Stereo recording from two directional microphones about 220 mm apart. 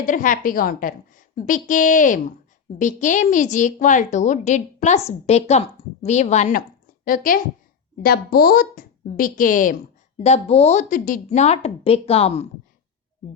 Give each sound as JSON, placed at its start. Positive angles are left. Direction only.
{"t": 0.0, "sound": "a woman's voice", "side_deg": 35}